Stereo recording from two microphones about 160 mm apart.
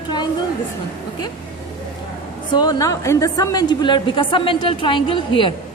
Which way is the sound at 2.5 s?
25° left (ahead or behind).